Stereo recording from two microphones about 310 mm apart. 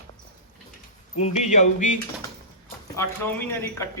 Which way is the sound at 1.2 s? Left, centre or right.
Left.